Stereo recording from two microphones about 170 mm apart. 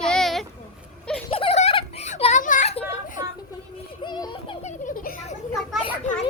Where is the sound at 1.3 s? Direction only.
35° left (ahead or behind).